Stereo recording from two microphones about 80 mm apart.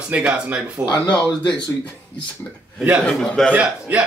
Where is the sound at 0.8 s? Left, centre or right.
Left.